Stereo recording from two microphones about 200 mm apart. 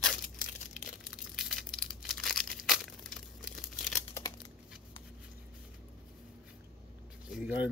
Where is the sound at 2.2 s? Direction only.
Centre (ahead or behind).